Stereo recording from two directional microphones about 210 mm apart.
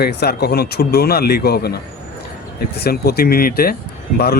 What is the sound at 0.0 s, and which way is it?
Speech, 50° left (ahead or behind).